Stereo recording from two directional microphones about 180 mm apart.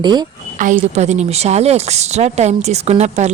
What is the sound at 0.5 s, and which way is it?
A woman's voice, 45° right (ahead or behind).